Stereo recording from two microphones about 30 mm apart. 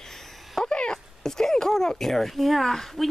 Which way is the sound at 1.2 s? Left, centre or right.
Centre.